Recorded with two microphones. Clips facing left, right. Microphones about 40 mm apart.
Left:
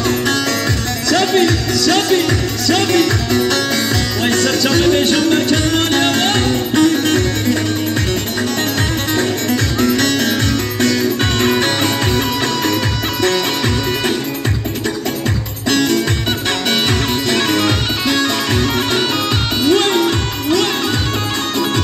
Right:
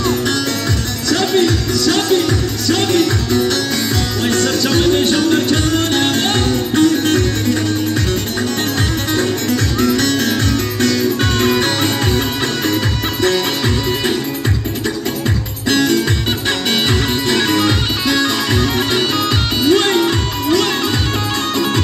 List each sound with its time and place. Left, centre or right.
1.9 s music: left
3.0 s music: centre
5.3 s music: left
6.8 s music: centre
9.1 s music: centre
16.4 s music: centre
19.7 s music: centre